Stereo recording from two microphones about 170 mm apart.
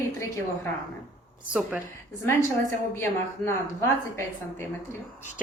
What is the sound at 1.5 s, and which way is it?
Speech, 5° right (ahead or behind).